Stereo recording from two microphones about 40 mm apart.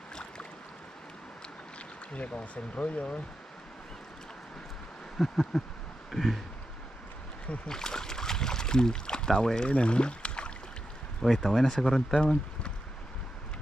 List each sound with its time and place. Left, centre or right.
0.1 s boat: left
2.1 s speech: left
5.3 s speech: centre
6.1 s a sound: centre
7.6 s speech: centre
11.2 s speech: centre